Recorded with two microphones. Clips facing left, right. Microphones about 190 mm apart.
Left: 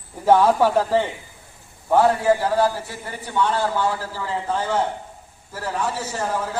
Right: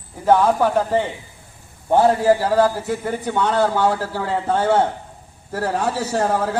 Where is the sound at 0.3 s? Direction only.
Centre (ahead or behind).